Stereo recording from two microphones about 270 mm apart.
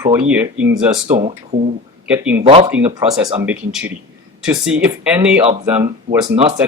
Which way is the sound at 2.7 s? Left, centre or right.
Centre.